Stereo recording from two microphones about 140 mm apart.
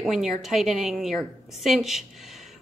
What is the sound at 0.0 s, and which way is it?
A woman's voice, centre (ahead or behind).